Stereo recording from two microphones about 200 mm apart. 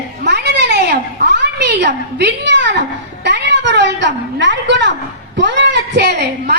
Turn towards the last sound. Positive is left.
turn(degrees=-55)  # may be behind; listen again after turning